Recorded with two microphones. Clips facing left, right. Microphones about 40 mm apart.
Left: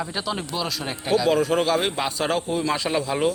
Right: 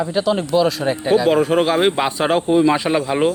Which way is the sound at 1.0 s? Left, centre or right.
Right.